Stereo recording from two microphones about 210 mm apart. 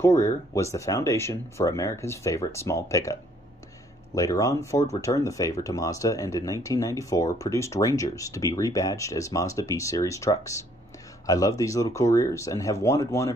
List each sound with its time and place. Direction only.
0.0 s speech: 15° left (ahead or behind)